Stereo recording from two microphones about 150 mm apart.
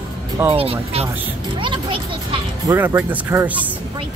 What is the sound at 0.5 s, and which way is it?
Speech, 40° right (ahead or behind).